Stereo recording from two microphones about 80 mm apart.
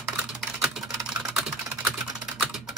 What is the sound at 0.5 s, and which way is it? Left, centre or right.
Typing, centre.